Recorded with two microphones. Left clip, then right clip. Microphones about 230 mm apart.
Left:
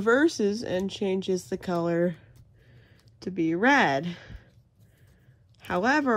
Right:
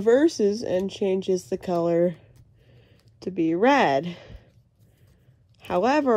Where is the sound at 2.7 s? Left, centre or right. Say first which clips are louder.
Right 2 dB; centre.